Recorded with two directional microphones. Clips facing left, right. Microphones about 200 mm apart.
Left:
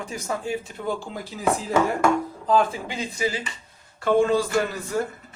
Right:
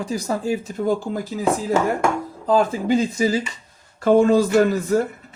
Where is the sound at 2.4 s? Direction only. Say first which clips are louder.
Right 5 dB; 40° right (ahead or behind).